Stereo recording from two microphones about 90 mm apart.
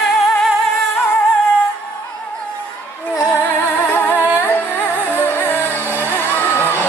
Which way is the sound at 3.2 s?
35° left (ahead or behind).